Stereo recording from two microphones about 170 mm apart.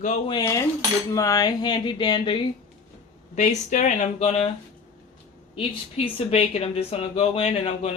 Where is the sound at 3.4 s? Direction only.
45° left (ahead or behind).